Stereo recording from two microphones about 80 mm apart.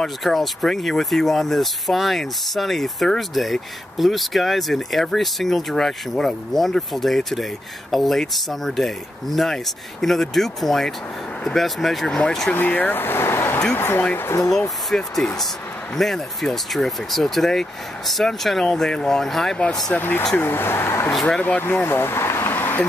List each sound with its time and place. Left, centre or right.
0.0 s speech: centre
12.5 s speech: left
14.9 s speech: centre
20.0 s speech: left
21.1 s speech: centre
21.4 s speech: left